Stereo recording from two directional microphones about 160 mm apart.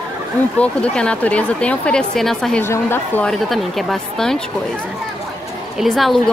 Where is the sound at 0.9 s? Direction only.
5° left (ahead or behind).